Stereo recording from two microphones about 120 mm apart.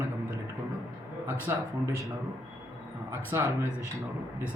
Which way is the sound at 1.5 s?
20° right (ahead or behind).